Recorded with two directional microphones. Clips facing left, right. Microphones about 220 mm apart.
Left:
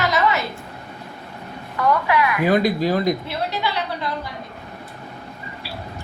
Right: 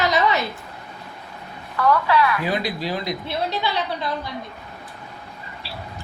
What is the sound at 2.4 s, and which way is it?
Speech, 50° left (ahead or behind).